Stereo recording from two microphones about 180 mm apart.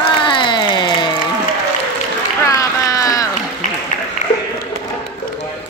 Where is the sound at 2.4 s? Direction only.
20° left (ahead or behind).